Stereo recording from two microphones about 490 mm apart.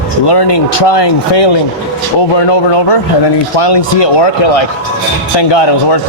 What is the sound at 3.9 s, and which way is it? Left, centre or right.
Speech, left.